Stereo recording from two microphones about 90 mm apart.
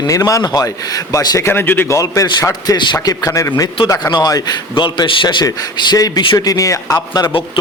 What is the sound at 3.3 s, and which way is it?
Speech, 30° left (ahead or behind).